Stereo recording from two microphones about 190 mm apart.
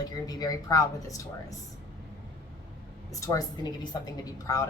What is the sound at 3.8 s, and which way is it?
Speech, 20° left (ahead or behind).